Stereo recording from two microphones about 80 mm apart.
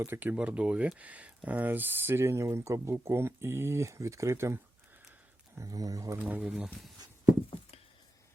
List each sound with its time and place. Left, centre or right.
0.0 s speech: right
5.5 s speech: right
6.1 s speech: right
6.4 s speech: centre